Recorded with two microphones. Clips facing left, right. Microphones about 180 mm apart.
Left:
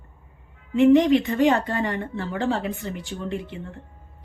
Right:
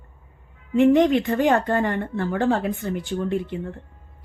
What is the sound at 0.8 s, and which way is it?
A woman's voice, 55° right (ahead or behind).